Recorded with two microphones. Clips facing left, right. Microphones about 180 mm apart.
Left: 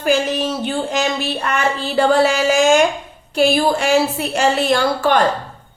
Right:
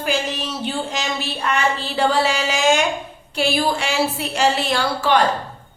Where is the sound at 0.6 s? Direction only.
50° left (ahead or behind).